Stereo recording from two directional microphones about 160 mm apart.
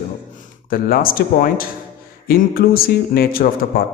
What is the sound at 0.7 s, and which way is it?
Speech, 65° left (ahead or behind).